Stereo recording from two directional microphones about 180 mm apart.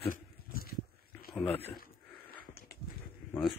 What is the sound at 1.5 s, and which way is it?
Speech, 35° left (ahead or behind).